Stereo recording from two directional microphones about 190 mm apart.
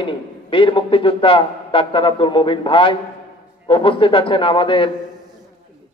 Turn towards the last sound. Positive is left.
turn(degrees=25)  # may be behind; listen again after turning